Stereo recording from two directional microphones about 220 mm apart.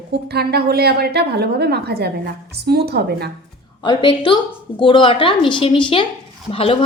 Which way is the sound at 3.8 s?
20° left (ahead or behind).